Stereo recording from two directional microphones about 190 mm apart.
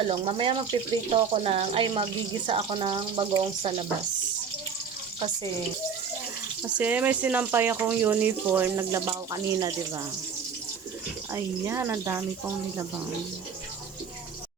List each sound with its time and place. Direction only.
0.1 s speech: 30° right (ahead or behind)
6.6 s speech: 10° right (ahead or behind)
11.3 s speech: 15° right (ahead or behind)